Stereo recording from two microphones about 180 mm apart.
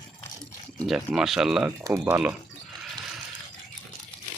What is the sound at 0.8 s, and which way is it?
Speech, centre (ahead or behind).